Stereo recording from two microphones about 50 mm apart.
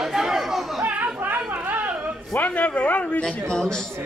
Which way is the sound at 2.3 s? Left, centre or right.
Left.